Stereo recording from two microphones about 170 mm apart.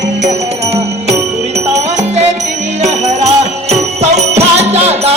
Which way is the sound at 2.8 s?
40° right (ahead or behind).